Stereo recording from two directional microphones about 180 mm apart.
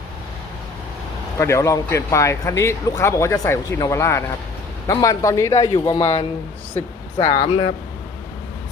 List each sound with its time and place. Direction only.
1.4 s a man's voice: 15° left (ahead or behind)